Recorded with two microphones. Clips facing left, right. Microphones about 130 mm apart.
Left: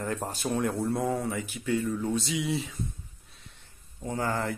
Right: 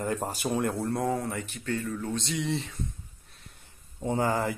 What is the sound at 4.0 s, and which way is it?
Speech, 20° right (ahead or behind).